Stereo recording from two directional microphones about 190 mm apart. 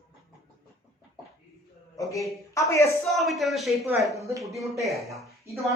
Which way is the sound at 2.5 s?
15° left (ahead or behind).